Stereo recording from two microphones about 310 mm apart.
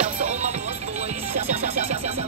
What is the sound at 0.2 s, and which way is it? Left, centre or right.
Music, right.